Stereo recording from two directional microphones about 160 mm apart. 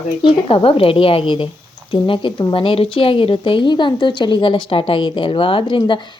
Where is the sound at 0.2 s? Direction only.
30° left (ahead or behind).